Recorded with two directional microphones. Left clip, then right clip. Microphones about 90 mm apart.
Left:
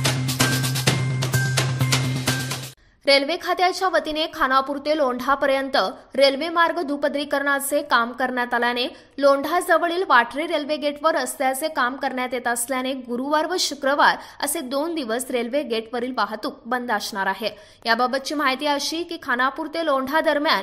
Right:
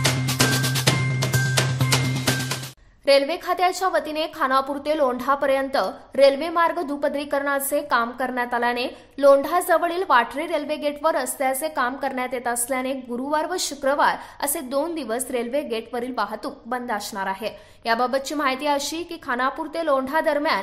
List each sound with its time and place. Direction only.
0.0 s music: centre (ahead or behind)
3.1 s a woman's voice: 25° left (ahead or behind)
9.2 s a woman's voice: 15° left (ahead or behind); by 17.5 s 35° left (ahead or behind)
17.8 s a woman's voice: 20° left (ahead or behind)
18.8 s a woman's voice: 10° left (ahead or behind)
19.2 s a woman's voice: 20° left (ahead or behind)